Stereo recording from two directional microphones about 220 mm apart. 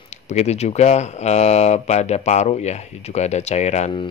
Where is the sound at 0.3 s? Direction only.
30° left (ahead or behind).